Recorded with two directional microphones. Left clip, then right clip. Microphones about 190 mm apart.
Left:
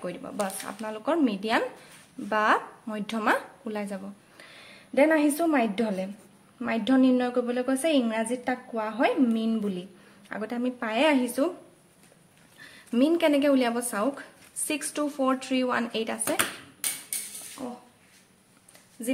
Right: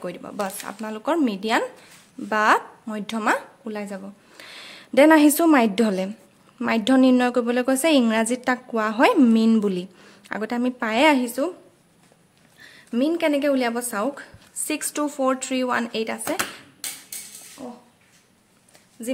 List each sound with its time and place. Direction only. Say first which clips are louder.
0.0 s speech: right 3 dB; 20° right (ahead or behind)
4.4 s a woman's voice: right 11 dB; 35° right (ahead or behind); by 11.5 s 20° right (ahead or behind)
12.5 s speech: right 1 dB; 10° right (ahead or behind)
17.6 s speech: even; 10° left (ahead or behind)
19.0 s speech: right 2 dB; 15° right (ahead or behind)